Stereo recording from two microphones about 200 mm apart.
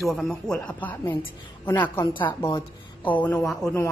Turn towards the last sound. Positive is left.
turn(degrees=10)  # may be behind; listen again after turning